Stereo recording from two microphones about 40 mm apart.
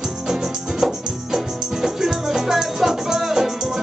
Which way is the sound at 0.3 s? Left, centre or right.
Centre.